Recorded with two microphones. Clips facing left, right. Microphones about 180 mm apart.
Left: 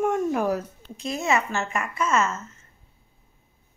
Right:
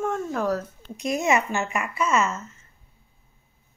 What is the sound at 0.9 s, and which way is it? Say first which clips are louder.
Speech: right 2 dB; 15° right (ahead or behind).